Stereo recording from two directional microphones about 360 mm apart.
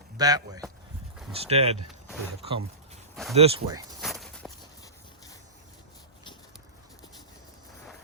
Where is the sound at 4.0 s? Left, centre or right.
Centre.